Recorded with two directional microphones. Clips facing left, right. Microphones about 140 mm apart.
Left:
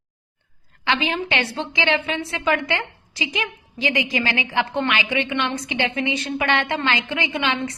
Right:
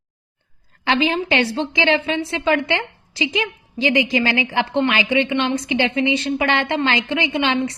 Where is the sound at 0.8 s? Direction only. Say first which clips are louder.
Right 4 dB; 35° right (ahead or behind).